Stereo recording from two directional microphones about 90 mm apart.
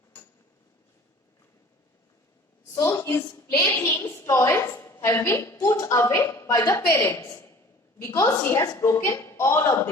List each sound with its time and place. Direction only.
2.7 s a woman's voice: 35° left (ahead or behind)
8.5 s a woman's voice: 35° left (ahead or behind)